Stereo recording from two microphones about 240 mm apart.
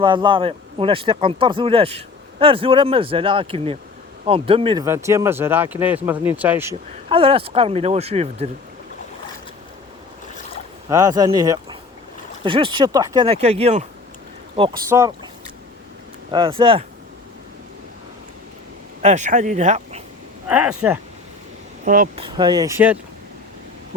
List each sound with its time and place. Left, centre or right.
0.0 s speech: centre
7.1 s speech: right
10.8 s speech: centre
14.8 s speech: centre
16.3 s speech: right
19.0 s speech: right
20.5 s speech: centre
21.8 s speech: right
22.2 s speech: centre